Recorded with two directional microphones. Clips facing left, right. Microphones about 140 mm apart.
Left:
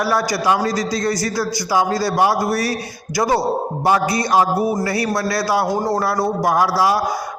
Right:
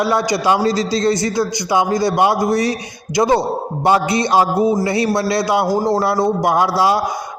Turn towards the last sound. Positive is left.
turn(degrees=-25)  # may be behind; listen again after turning